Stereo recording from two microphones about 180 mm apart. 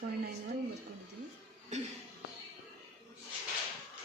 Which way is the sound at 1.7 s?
40° right (ahead or behind).